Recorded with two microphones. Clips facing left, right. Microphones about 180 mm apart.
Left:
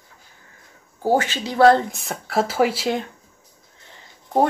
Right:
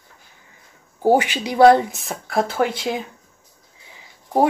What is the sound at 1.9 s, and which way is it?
Speech, centre (ahead or behind).